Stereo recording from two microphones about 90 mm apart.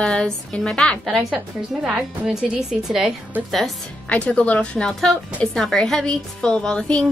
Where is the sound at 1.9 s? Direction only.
5° right (ahead or behind).